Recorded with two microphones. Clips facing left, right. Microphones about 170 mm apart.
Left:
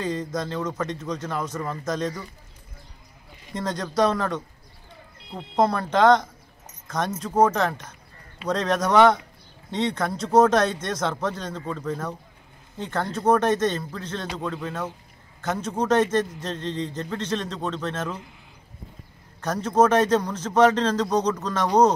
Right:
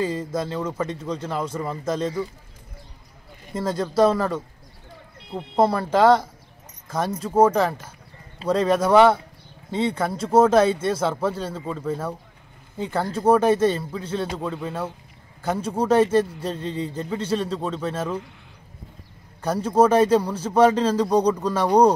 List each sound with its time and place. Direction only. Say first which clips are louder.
0.0 s a man's voice: right 3 dB; 10° right (ahead or behind)
0.9 s speech: right 2 dB; 30° right (ahead or behind)
1.5 s a man's voice: right 2 dB; 10° right (ahead or behind)
3.5 s a man's voice: right 3 dB; 5° right (ahead or behind)
19.4 s a man's voice: right 2 dB; 10° right (ahead or behind)